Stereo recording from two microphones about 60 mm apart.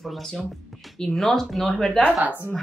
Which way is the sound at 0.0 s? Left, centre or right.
Centre.